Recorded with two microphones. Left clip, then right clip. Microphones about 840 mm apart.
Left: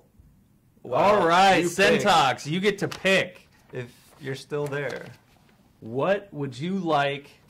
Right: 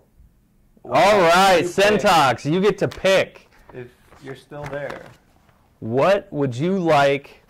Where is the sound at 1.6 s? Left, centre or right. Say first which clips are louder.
Right 4 dB; right.